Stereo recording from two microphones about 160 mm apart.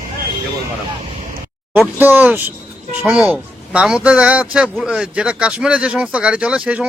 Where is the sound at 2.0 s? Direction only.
10° right (ahead or behind).